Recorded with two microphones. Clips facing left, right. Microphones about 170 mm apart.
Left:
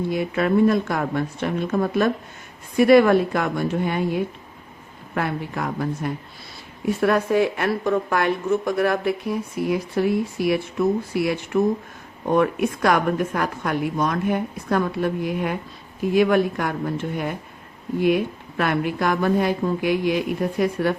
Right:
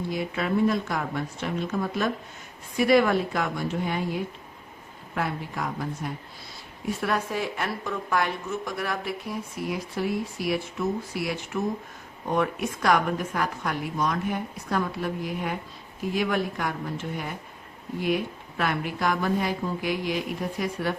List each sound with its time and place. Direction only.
0.1 s a woman's voice: 55° left (ahead or behind)
12.4 s a woman's voice: 55° left (ahead or behind)